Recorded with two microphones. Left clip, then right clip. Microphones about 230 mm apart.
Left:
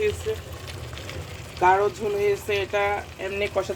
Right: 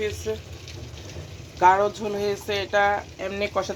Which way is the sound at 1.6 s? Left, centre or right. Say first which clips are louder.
Right 1 dB; centre.